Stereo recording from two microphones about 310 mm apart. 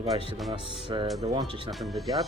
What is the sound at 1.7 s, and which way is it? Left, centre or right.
Speech, centre.